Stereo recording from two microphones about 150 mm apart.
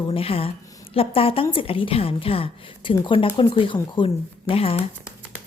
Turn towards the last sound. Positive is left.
turn(degrees=40)  # may be behind; listen again after turning